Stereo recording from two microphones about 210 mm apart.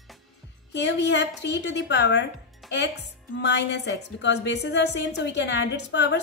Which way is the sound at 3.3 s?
55° left (ahead or behind).